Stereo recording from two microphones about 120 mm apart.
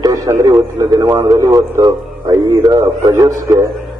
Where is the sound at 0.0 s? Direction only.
30° right (ahead or behind).